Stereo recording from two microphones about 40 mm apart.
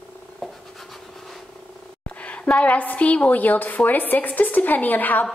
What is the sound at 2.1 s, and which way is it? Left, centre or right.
A woman's voice, left.